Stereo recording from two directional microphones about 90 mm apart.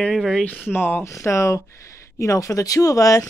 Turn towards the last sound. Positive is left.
turn(degrees=40)  # may be behind; listen again after turning